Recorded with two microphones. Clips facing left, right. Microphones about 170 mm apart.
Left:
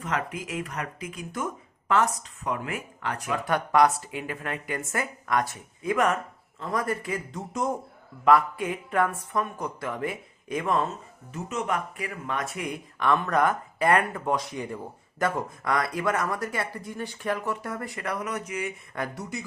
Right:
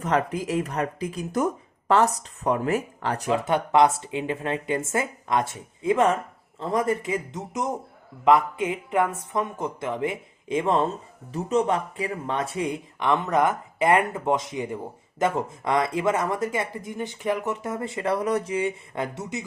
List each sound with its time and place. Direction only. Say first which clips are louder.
0.0 s speech: right 6 dB; 35° right (ahead or behind)
3.2 s speech: right 4 dB; 20° right (ahead or behind)